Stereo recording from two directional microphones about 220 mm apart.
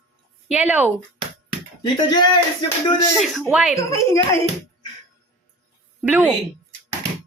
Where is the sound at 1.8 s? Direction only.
20° left (ahead or behind).